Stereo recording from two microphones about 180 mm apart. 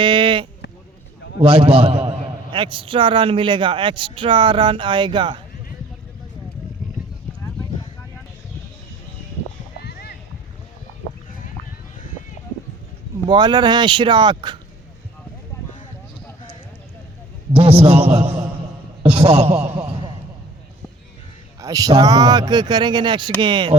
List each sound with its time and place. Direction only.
0.0 s sheep: 25° right (ahead or behind)
1.4 s a man's voice: 35° right (ahead or behind)
9.8 s a sound: 60° left (ahead or behind)
13.2 s a man's voice: 25° right (ahead or behind)
17.5 s a man's voice: 35° right (ahead or behind)
19.0 s a sound: 35° right (ahead or behind)
21.6 s a man's voice: 20° right (ahead or behind)